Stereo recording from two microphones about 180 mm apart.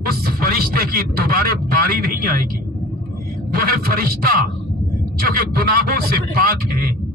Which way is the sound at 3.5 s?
55° right (ahead or behind).